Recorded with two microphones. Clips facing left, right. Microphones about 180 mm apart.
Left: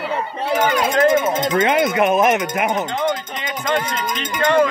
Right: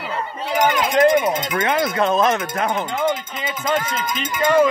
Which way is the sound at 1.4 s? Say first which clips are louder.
Left 4 dB; 25° left (ahead or behind).